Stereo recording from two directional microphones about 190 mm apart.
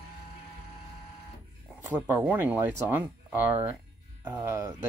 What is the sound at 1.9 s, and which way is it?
Speech, 10° right (ahead or behind).